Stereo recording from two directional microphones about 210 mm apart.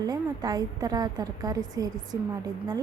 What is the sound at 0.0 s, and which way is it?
Speech, 20° right (ahead or behind).